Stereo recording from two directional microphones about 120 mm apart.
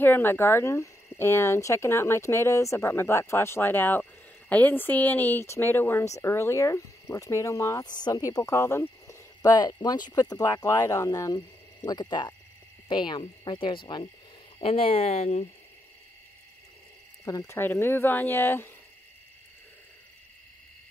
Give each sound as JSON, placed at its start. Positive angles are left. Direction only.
{"t": 0.0, "sound": "speech", "side_deg": 15}
{"t": 14.6, "sound": "speech", "side_deg": 50}
{"t": 17.2, "sound": "speech", "side_deg": 30}